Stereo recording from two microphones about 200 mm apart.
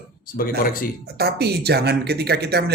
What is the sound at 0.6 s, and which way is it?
Speech, 45° left (ahead or behind).